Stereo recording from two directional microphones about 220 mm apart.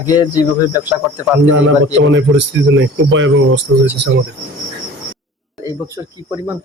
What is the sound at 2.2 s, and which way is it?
Speech, 55° right (ahead or behind).